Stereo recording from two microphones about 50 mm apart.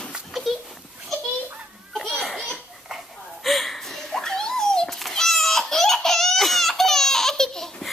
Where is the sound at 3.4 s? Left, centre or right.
Centre.